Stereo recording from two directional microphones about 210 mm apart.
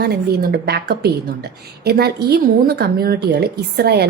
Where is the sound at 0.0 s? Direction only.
50° right (ahead or behind).